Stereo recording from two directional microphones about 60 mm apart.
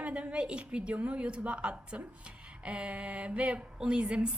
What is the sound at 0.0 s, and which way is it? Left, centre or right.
A woman's voice, centre.